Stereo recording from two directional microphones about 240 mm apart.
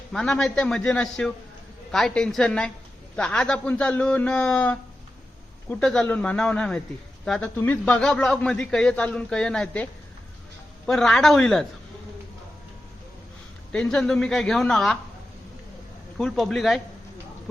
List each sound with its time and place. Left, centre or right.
0.1 s a man's voice: centre
13.7 s a man's voice: centre
16.1 s a man's voice: centre